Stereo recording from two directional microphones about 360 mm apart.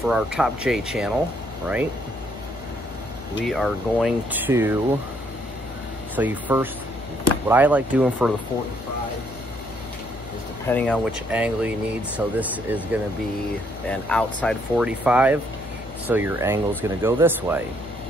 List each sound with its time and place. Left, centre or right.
0.0 s speech: centre
3.4 s speech: centre
6.1 s speech: centre
10.7 s speech: centre